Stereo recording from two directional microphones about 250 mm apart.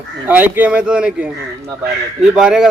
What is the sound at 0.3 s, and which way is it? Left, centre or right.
A man's voice, centre.